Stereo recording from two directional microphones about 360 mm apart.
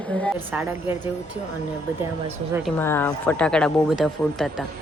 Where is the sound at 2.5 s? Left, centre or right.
Centre.